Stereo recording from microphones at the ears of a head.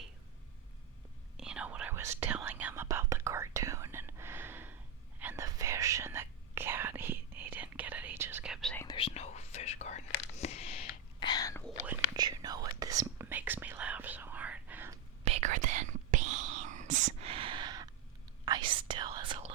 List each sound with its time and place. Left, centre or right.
1.5 s whispering: right
8.9 s whispering: left
12.1 s whispering: right